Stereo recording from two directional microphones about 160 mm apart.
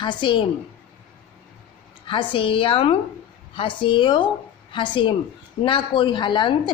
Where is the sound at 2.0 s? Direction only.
35° left (ahead or behind).